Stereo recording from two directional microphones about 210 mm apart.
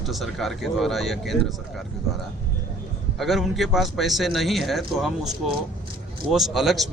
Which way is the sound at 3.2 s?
Centre (ahead or behind).